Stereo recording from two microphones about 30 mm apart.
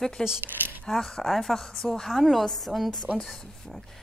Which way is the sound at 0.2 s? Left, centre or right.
Centre.